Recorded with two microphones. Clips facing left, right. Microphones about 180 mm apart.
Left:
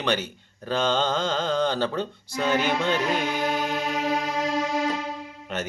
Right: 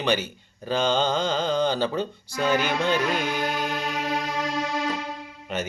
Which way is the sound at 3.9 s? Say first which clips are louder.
Left 2 dB; 45° left (ahead or behind).